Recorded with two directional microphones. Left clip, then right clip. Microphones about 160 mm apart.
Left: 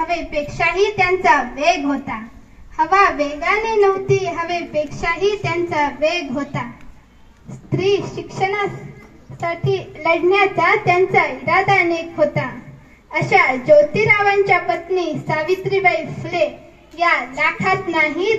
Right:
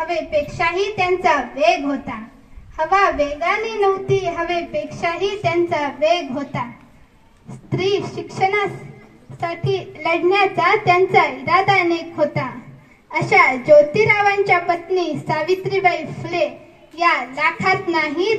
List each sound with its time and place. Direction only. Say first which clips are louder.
0.0 s a child's voice: right 1 dB; 90° right
2.7 s a child's voice: left 2 dB; 90° right
7.7 s a child's voice: left 2 dB; 70° right (ahead or behind); by 18.3 s 40° right (ahead or behind)